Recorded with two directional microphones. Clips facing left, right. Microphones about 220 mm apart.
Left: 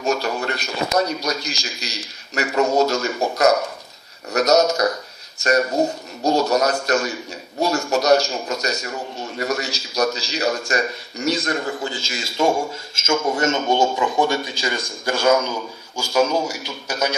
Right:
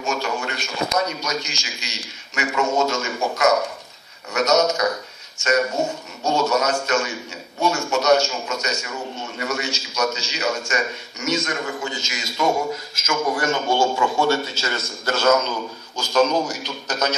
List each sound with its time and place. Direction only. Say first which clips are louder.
0.0 s a man's voice: left 3 dB; 35° left (ahead or behind); by 17.1 s 10° left (ahead or behind)